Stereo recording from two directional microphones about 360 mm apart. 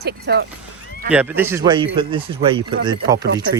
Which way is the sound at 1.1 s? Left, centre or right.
Centre.